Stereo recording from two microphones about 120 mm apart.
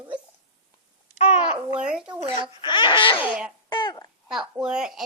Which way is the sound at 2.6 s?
40° left (ahead or behind).